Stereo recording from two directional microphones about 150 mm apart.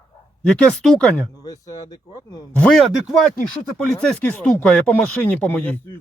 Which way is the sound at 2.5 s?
5° left (ahead or behind).